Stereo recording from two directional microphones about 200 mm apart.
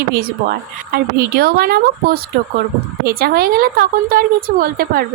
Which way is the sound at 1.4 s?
50° right (ahead or behind).